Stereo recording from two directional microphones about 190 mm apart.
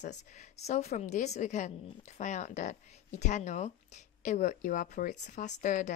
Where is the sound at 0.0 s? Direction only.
40° left (ahead or behind).